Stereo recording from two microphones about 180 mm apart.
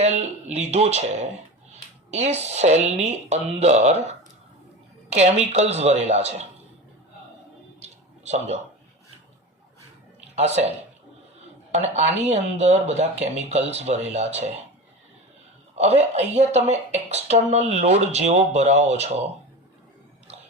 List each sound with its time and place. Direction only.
0.0 s speech: 35° right (ahead or behind)
5.1 s speech: 35° right (ahead or behind)
7.8 s a sound: 35° right (ahead or behind)
10.3 s speech: 35° right (ahead or behind)
15.7 s a woman's voice: 35° right (ahead or behind)